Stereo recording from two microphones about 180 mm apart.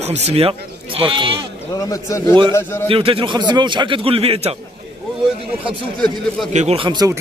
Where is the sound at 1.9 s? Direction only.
15° left (ahead or behind).